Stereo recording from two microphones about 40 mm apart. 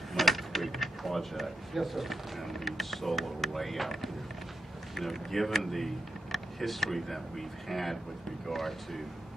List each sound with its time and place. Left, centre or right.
0.1 s speech: centre